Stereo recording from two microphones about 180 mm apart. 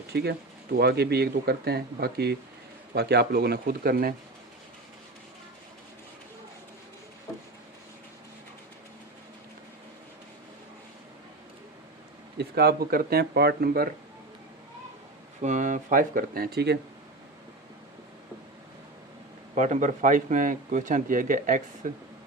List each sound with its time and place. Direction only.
0.1 s speech: 65° right (ahead or behind)
12.4 s speech: 60° right (ahead or behind)
15.4 s speech: 45° right (ahead or behind); by 16.7 s 60° right (ahead or behind)
19.5 s speech: 40° right (ahead or behind)